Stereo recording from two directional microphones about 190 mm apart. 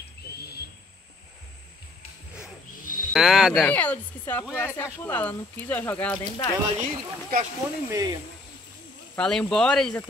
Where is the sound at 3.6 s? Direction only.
10° left (ahead or behind).